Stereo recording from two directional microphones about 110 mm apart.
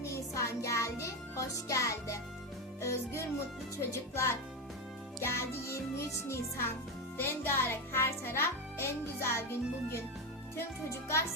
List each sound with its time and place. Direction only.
0.3 s music: 25° left (ahead or behind)
2.8 s a child's voice: 25° left (ahead or behind)